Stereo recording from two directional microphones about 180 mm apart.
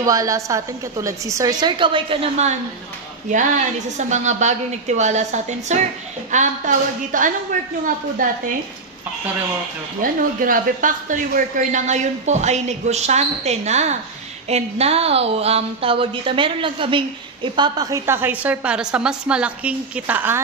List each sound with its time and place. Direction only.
0.0 s a woman's voice: 20° right (ahead or behind); by 8.4 s 50° right (ahead or behind)
10.0 s a woman's voice: 50° right (ahead or behind); by 20.3 s 10° right (ahead or behind)